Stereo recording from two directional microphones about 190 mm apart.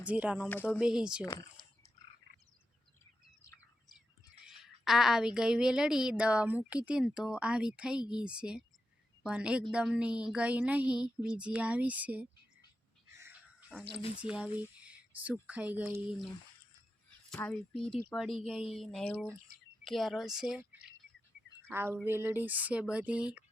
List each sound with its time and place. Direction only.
0.0 s speech: 5° right (ahead or behind)
0.4 s speech: 10° left (ahead or behind)
0.8 s a woman's voice: 5° right (ahead or behind)
1.2 s a sound: 20° left (ahead or behind)
3.4 s bird: 15° left (ahead or behind)
4.4 s a woman's voice: centre (ahead or behind)
13.1 s a sound: 10° right (ahead or behind)
14.2 s speech: 5° right (ahead or behind)
17.3 s a woman's voice: 5° left (ahead or behind)
21.7 s speech: 10° right (ahead or behind)